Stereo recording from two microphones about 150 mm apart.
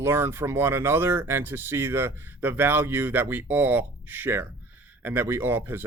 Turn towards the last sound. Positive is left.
turn(degrees=-15)  # may be behind; listen again after turning